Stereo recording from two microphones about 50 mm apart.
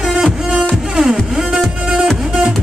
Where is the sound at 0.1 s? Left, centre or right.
Centre.